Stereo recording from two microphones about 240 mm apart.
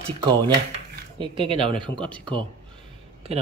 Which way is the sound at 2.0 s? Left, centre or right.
Centre.